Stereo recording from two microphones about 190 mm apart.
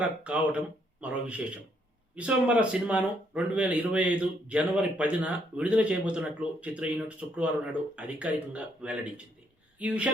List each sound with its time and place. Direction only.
0.0 s speech: 5° right (ahead or behind)